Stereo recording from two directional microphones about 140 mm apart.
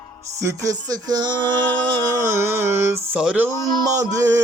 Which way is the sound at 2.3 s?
20° right (ahead or behind).